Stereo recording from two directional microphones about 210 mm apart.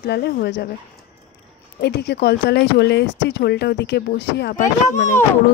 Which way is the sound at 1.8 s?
50° left (ahead or behind).